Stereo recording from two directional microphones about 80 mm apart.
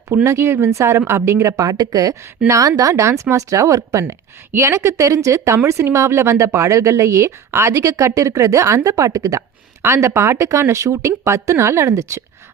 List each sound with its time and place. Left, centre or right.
0.3 s speech: right